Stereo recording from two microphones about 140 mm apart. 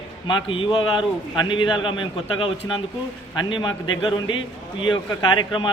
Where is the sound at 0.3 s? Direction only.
35° left (ahead or behind).